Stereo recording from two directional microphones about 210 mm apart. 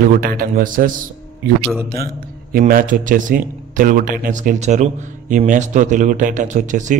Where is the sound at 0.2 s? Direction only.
45° right (ahead or behind).